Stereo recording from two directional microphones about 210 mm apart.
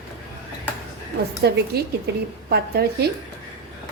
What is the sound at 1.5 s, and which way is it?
A woman's voice, 50° right (ahead or behind).